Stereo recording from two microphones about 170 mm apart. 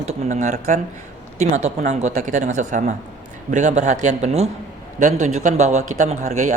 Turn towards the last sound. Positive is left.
turn(degrees=-45)  # may be behind; listen again after turning